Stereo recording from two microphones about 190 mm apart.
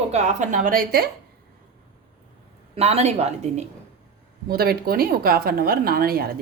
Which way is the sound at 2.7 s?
35° right (ahead or behind).